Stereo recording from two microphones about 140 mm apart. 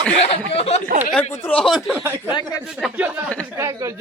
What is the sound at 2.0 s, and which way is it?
Speech, 15° right (ahead or behind).